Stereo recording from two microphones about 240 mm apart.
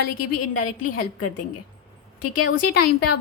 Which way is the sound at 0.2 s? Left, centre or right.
Left.